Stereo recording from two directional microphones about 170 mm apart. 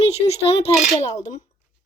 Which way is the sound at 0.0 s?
35° left (ahead or behind).